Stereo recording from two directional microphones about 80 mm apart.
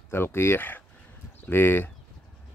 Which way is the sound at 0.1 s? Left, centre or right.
Left.